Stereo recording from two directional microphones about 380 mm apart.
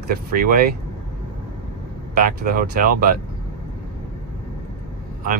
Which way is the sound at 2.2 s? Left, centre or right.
Right.